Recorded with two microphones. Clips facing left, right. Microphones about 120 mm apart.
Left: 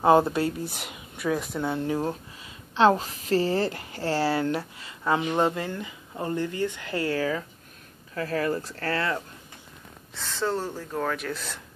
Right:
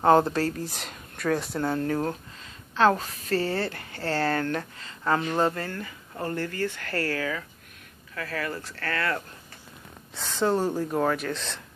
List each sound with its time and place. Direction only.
0.0 s speech: 10° left (ahead or behind)
2.7 s a woman's voice: 20° left (ahead or behind)
7.2 s speech: 25° left (ahead or behind)
10.1 s speech: 15° right (ahead or behind)
11.1 s speech: 5° left (ahead or behind)